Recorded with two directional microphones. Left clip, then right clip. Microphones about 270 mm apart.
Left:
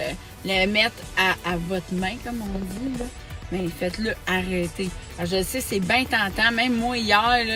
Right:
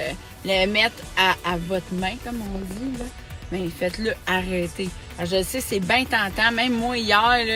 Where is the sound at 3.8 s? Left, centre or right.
Centre.